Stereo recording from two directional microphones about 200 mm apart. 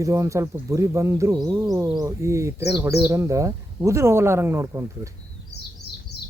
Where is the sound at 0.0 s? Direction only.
15° right (ahead or behind).